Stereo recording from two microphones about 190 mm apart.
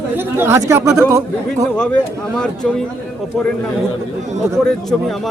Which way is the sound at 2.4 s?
5° left (ahead or behind).